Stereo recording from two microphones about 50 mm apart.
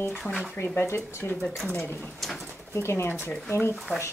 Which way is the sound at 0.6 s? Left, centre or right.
Left.